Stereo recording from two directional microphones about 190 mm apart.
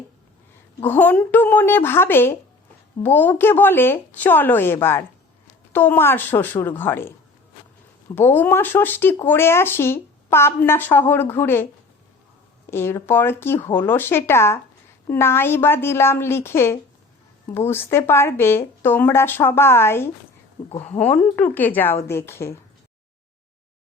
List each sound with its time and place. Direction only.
0.8 s a woman's voice: 10° left (ahead or behind)
8.1 s a woman's voice: 10° left (ahead or behind)
12.7 s a woman's voice: 10° left (ahead or behind)
20.7 s a woman's voice: 35° left (ahead or behind)
21.0 s a woman's voice: 10° left (ahead or behind)